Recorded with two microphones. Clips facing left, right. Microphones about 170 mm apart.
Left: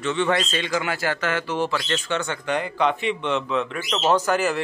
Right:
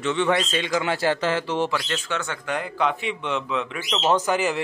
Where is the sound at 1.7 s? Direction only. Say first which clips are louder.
Left 2 dB; 10° right (ahead or behind).